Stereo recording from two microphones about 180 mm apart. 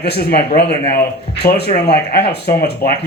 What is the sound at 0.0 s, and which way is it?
Speech, 60° left (ahead or behind).